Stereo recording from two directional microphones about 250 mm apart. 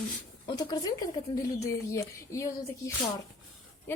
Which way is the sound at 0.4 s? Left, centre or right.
Centre.